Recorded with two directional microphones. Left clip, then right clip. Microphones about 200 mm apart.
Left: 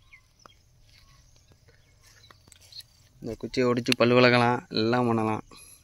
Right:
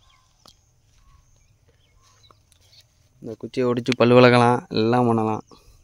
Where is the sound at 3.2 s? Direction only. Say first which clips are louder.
Right 2 dB; 15° right (ahead or behind).